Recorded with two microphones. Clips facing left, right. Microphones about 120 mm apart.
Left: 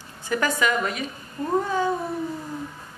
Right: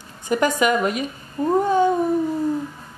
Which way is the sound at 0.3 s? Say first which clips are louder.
Right 5 dB; 20° right (ahead or behind).